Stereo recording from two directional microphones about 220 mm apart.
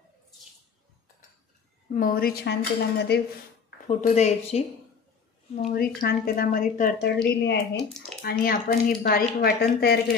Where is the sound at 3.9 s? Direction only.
30° left (ahead or behind).